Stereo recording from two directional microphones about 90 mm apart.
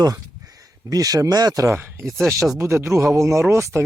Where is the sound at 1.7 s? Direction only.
25° right (ahead or behind).